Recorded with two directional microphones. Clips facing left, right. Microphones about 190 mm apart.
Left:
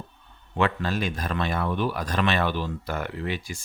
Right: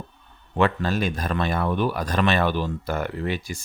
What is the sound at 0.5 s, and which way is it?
Speech, 45° right (ahead or behind).